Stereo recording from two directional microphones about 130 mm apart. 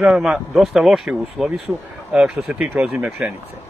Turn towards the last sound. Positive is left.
turn(degrees=-10)  # may be behind; listen again after turning